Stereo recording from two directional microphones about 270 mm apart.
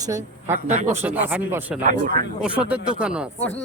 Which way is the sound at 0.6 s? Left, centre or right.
Right.